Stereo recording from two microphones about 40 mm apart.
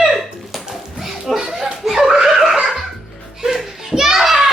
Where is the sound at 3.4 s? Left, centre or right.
Centre.